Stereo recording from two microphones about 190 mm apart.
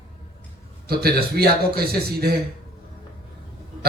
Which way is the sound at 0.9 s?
55° right (ahead or behind).